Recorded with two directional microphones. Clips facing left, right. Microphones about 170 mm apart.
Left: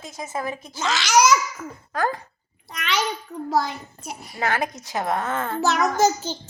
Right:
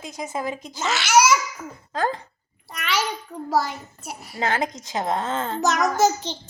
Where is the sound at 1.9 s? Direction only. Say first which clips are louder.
Even; 25° right (ahead or behind).